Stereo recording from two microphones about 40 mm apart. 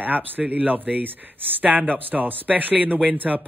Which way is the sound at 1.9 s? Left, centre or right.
Right.